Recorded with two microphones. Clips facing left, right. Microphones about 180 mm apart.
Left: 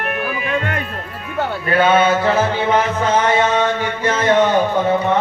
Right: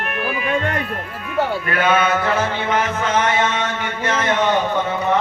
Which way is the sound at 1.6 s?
30° left (ahead or behind).